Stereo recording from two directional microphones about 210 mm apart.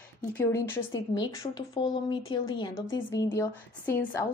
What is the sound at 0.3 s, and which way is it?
A woman's voice, 10° left (ahead or behind).